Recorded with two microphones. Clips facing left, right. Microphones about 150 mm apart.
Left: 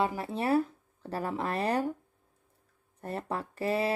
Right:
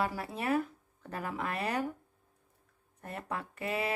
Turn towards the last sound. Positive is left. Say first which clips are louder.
# left 5 dB
turn(degrees=35)  # may be behind; listen again after turning